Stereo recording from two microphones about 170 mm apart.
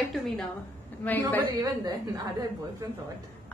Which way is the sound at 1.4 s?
25° right (ahead or behind).